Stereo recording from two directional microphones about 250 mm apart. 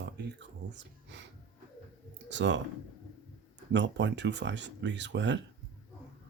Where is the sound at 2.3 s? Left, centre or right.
Right.